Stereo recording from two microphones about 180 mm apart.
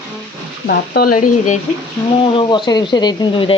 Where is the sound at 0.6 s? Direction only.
60° left (ahead or behind).